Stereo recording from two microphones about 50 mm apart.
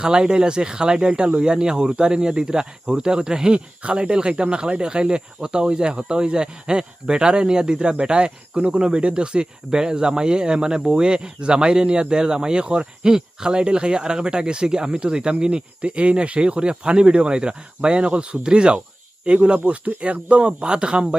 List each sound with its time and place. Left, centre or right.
0.0 s speech: centre